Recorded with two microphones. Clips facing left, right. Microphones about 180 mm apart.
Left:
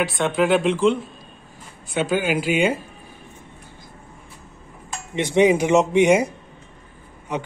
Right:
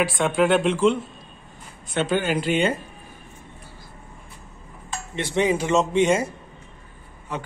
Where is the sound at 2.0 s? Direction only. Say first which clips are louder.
Left 1 dB; 10° left (ahead or behind).